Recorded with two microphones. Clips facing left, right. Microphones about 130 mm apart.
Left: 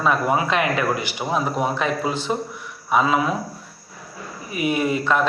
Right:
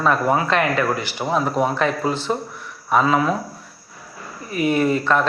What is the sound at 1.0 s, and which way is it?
Speech, 30° right (ahead or behind).